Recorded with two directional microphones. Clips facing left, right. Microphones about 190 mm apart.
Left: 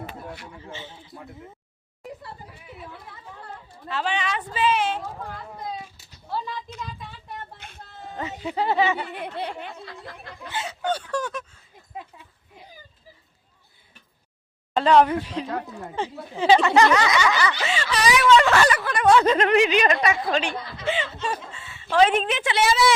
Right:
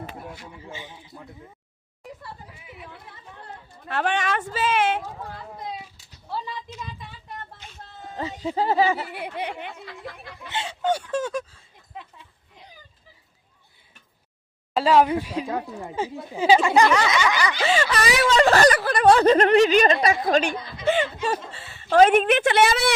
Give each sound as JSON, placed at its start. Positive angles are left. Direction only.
{"t": 0.5, "sound": "speech", "side_deg": -15}
{"t": 3.8, "sound": "speech", "side_deg": -55}
{"t": 7.6, "sound": "a sound", "side_deg": 55}
{"t": 8.5, "sound": "speech", "side_deg": -40}
{"t": 9.0, "sound": "speech", "side_deg": -10}
{"t": 10.5, "sound": "speech", "side_deg": -30}
{"t": 10.8, "sound": "speech", "side_deg": -20}
{"t": 11.3, "sound": "speech", "side_deg": -35}
{"t": 14.7, "sound": "speech", "side_deg": -5}
{"t": 17.7, "sound": "speech", "side_deg": -50}
{"t": 18.2, "sound": "speech", "side_deg": -35}
{"t": 21.8, "sound": "speech", "side_deg": -50}